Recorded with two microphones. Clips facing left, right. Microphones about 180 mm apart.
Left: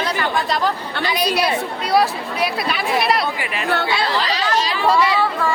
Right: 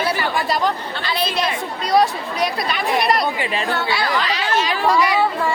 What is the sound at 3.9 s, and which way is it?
Speech, 25° left (ahead or behind).